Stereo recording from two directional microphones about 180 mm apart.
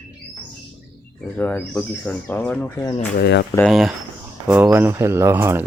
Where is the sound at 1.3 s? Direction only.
5° left (ahead or behind).